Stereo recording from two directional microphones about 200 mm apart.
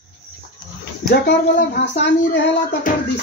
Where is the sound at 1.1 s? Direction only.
50° left (ahead or behind).